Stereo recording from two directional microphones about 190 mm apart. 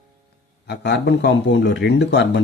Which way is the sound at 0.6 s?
60° left (ahead or behind).